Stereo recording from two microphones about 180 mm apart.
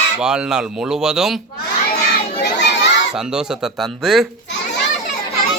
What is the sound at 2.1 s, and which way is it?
Crowd, 70° left (ahead or behind).